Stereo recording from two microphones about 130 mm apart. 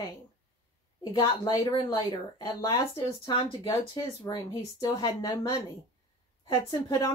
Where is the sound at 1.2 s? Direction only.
30° left (ahead or behind).